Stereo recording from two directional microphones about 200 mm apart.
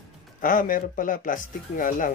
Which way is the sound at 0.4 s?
45° left (ahead or behind).